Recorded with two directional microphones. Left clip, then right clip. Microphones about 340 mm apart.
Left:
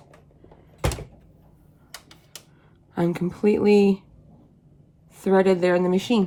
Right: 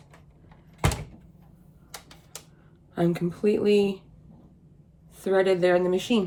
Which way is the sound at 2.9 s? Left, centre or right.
Left.